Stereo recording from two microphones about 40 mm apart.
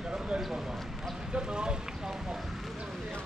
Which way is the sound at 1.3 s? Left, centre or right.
Right.